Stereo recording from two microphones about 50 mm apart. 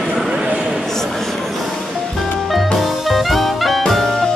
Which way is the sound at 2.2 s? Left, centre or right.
Centre.